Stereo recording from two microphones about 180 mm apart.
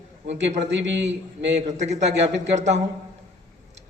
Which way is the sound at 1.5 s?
40° right (ahead or behind).